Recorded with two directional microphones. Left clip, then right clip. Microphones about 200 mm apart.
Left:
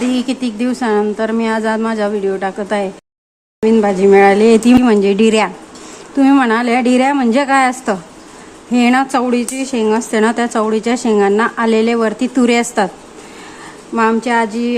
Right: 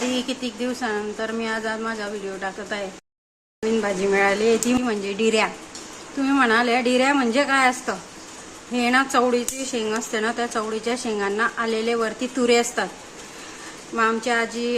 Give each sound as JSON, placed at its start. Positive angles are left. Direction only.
{"t": 0.1, "sound": "speech", "side_deg": 45}
{"t": 13.9, "sound": "speech", "side_deg": 30}